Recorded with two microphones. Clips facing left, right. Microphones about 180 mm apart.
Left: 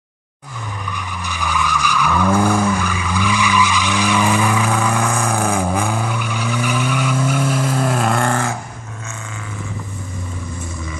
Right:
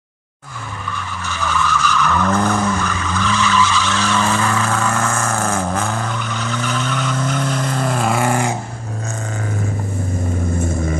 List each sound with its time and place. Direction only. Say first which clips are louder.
0.9 s vehicle: right 1 dB; 15° left (ahead or behind); by 8.5 s 15° right (ahead or behind)
10.6 s vehicle: right 9 dB; 50° right (ahead or behind)